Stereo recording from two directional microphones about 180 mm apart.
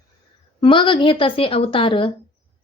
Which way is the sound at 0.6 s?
30° left (ahead or behind).